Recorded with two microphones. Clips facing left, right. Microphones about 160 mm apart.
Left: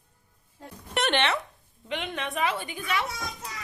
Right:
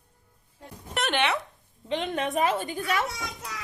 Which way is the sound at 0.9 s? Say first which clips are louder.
Left 1 dB; centre (ahead or behind).